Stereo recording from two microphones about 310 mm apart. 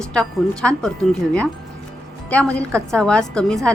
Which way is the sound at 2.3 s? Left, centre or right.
Centre.